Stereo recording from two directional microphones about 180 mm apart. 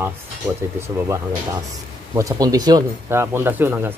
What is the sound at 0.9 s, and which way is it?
Speech, 15° right (ahead or behind).